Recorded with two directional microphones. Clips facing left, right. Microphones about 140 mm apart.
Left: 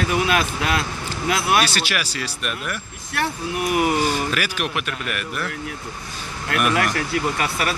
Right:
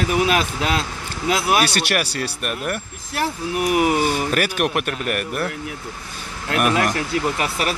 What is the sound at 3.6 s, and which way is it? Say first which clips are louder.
Speech: right 2 dB; 5° right (ahead or behind).